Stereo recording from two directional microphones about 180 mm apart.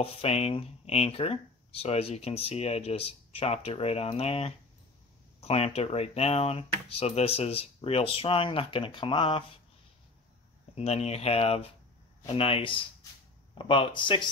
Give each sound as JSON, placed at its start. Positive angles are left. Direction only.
{"t": 0.0, "sound": "speech", "side_deg": 35}
{"t": 10.7, "sound": "speech", "side_deg": 35}